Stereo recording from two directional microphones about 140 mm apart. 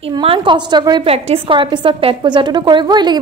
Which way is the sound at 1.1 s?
45° right (ahead or behind).